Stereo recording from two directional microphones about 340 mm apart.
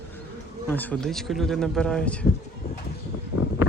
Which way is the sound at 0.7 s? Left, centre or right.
Centre.